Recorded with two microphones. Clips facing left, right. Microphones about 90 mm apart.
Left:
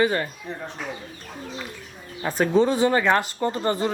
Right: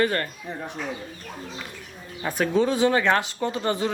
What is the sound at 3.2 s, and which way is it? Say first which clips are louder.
Speech: left 2 dB; 45° left (ahead or behind).